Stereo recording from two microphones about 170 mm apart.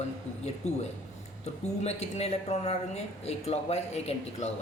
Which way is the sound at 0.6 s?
40° left (ahead or behind).